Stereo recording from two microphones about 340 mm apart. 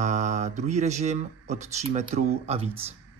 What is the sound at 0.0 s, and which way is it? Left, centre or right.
Speech, right.